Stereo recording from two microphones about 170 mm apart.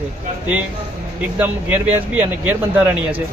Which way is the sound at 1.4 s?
10° right (ahead or behind).